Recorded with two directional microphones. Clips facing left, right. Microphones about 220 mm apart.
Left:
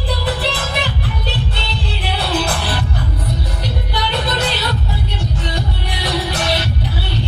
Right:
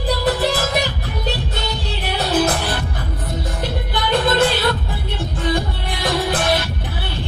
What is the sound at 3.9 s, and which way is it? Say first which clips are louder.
Music: right 5 dB; 50° right (ahead or behind).